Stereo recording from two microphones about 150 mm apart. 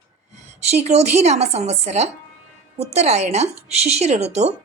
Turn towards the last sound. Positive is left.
turn(degrees=-45)  # may be behind; listen again after turning